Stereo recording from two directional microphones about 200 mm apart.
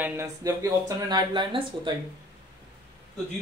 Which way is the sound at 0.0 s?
10° right (ahead or behind).